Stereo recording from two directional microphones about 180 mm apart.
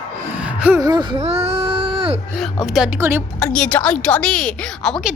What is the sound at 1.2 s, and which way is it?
Music, 35° right (ahead or behind).